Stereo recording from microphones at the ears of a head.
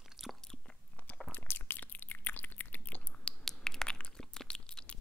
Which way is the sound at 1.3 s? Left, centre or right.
Left.